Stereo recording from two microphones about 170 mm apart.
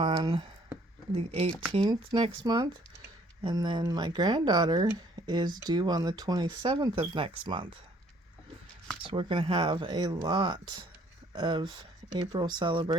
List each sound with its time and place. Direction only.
0.0 s speech: 30° right (ahead or behind)
1.7 s speech: 25° right (ahead or behind)
9.0 s speech: 30° right (ahead or behind)